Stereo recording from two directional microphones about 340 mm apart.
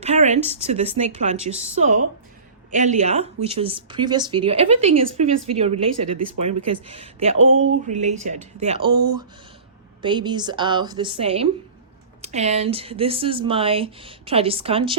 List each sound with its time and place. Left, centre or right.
0.0 s a woman's voice: centre
7.3 s a sound: right
7.9 s a woman's voice: right
10.0 s speech: centre